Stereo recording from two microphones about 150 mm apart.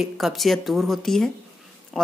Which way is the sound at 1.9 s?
Centre (ahead or behind).